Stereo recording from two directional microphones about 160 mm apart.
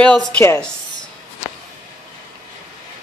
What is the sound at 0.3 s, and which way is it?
Speech, 10° left (ahead or behind).